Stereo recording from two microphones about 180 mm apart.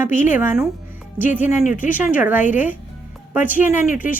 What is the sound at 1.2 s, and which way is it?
Speech, 45° left (ahead or behind).